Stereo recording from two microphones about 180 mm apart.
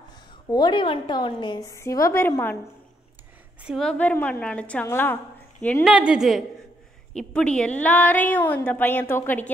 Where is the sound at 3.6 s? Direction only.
Centre (ahead or behind).